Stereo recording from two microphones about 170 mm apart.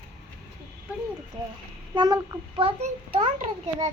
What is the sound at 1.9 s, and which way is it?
A child's voice, 25° right (ahead or behind).